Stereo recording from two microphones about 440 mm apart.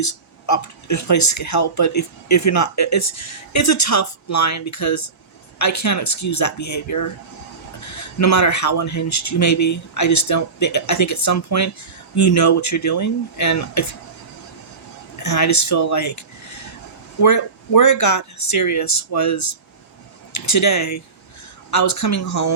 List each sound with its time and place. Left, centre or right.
0.0 s speech: left
15.2 s speech: left